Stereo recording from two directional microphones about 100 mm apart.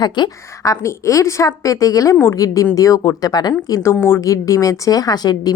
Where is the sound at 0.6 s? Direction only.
30° left (ahead or behind).